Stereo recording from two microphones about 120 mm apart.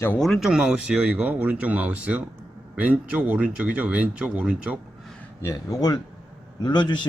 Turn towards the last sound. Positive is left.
turn(degrees=35)  # may be behind; listen again after turning